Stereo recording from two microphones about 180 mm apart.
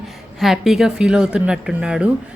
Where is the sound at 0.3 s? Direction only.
Centre (ahead or behind).